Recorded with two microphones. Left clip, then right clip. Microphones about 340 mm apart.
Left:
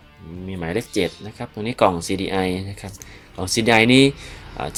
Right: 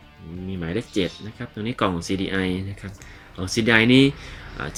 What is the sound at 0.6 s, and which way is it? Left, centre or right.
Speech, centre.